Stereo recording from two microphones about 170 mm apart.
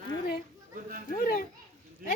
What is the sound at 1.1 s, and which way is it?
Speech, 60° left (ahead or behind).